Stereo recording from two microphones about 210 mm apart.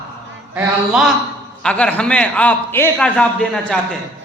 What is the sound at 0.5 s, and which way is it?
A man's voice, 5° right (ahead or behind).